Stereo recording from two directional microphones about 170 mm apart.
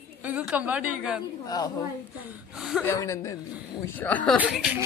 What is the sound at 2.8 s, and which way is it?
A woman's voice, 20° left (ahead or behind).